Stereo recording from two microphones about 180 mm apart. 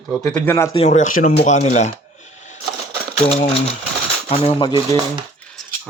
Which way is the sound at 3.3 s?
30° left (ahead or behind).